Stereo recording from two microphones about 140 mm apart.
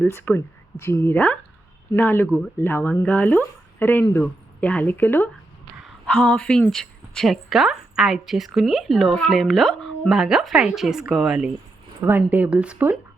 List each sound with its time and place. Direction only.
0.0 s a woman's voice: 15° left (ahead or behind); by 13.0 s 10° right (ahead or behind)